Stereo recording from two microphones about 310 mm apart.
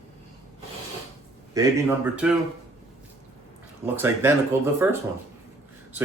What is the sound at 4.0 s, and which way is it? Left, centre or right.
Speech, centre.